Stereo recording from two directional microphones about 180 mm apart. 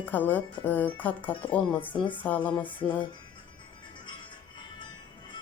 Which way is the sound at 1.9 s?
25° left (ahead or behind).